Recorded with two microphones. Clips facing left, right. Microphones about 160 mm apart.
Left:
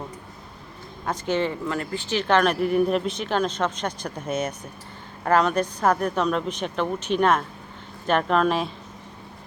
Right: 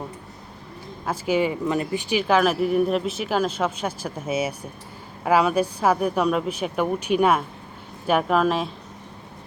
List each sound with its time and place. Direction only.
1.0 s speech: 5° right (ahead or behind)